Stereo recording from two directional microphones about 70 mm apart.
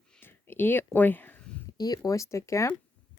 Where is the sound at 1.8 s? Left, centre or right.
Left.